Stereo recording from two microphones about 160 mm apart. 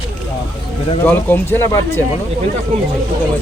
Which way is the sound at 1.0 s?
15° left (ahead or behind).